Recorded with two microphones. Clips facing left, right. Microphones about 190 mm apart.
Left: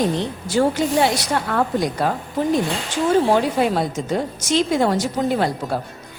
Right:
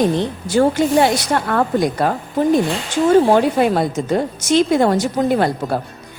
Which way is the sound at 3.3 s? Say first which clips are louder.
Right 4 dB; 55° right (ahead or behind).